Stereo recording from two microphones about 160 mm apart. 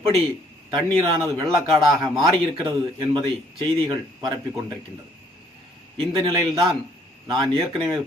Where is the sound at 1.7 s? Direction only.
Centre (ahead or behind).